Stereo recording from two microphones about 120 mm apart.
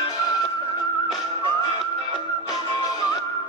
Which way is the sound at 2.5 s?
30° left (ahead or behind).